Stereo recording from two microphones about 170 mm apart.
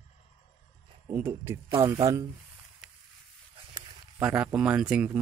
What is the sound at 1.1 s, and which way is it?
Speech, 15° right (ahead or behind).